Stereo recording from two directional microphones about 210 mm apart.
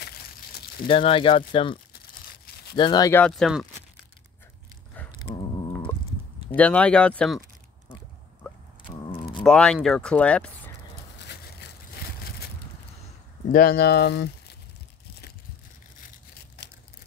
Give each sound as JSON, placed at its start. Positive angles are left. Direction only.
{"t": 0.8, "sound": "speech", "side_deg": 25}
{"t": 5.2, "sound": "a sound", "side_deg": 20}
{"t": 6.5, "sound": "speech", "side_deg": 5}
{"t": 9.4, "sound": "speech", "side_deg": 5}
{"t": 11.2, "sound": "a sound", "side_deg": 50}
{"t": 13.5, "sound": "speech", "side_deg": 45}
{"t": 16.6, "sound": "crushing", "side_deg": 50}